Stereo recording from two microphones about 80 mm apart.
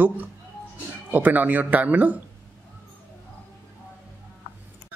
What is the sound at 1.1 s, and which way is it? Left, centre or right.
A woman's voice, right.